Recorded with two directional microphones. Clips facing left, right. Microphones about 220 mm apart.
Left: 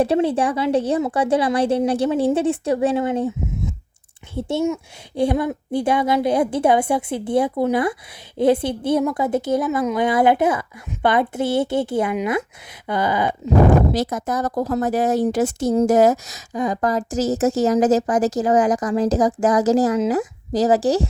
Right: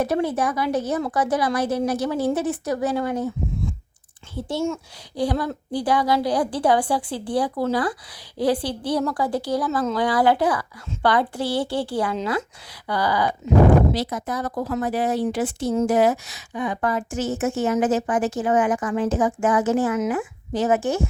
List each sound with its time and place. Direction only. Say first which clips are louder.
0.0 s speech: left 4 dB; 30° left (ahead or behind)
13.7 s speech: left 1 dB; 45° left (ahead or behind)